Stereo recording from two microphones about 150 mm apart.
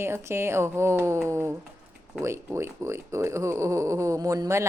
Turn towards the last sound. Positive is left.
turn(degrees=-20)  # may be behind; listen again after turning